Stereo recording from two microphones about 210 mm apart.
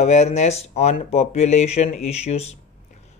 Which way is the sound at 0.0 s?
30° left (ahead or behind).